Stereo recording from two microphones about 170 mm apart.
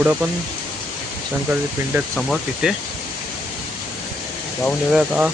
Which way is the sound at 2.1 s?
Centre (ahead or behind).